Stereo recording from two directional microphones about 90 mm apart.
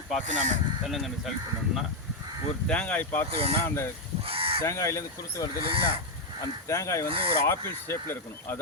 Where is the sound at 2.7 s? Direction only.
15° left (ahead or behind).